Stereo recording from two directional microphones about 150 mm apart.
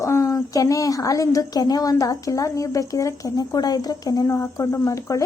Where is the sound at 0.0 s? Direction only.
20° left (ahead or behind).